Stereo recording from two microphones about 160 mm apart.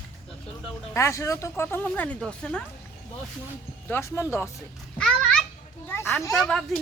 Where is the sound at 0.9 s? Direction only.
20° left (ahead or behind).